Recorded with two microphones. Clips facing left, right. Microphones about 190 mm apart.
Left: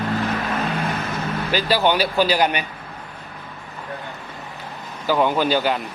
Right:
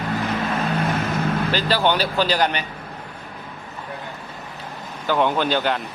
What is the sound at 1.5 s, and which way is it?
A man's voice, 10° left (ahead or behind).